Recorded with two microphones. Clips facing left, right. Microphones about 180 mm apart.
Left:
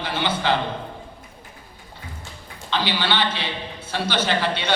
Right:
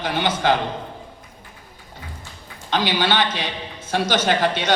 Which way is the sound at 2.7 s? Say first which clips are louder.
Right 3 dB; 45° right (ahead or behind).